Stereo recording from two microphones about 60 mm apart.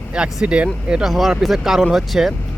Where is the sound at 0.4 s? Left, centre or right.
Centre.